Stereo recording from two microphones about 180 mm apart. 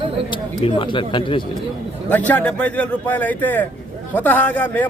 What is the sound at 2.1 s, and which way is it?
Speech, 10° left (ahead or behind).